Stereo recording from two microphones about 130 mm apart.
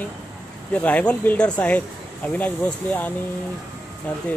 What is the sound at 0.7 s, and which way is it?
Speech, 10° left (ahead or behind).